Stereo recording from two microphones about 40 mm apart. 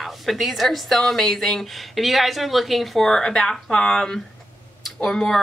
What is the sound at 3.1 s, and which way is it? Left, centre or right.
A woman's voice, centre.